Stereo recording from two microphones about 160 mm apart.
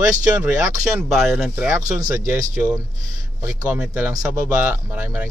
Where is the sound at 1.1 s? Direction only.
Centre (ahead or behind).